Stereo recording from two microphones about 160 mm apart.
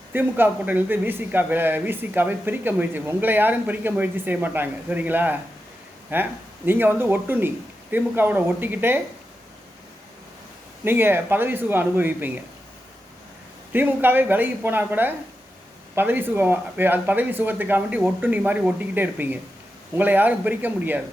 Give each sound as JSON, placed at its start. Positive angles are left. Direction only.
{"t": 0.1, "sound": "a man's voice", "side_deg": -10}
{"t": 10.8, "sound": "a man's voice", "side_deg": -15}
{"t": 13.7, "sound": "a man's voice", "side_deg": -10}